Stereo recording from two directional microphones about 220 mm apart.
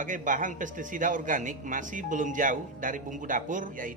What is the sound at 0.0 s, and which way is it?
A man's voice, 35° right (ahead or behind).